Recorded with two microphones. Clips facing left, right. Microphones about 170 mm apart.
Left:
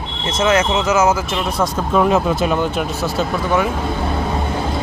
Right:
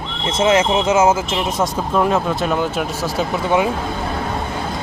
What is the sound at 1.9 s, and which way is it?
Speech, 5° left (ahead or behind).